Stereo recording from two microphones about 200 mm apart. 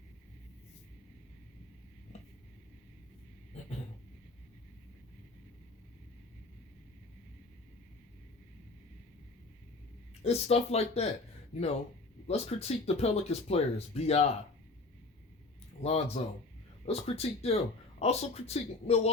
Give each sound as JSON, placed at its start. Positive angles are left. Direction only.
{"t": 10.2, "sound": "speech", "side_deg": 30}
{"t": 15.8, "sound": "speech", "side_deg": 30}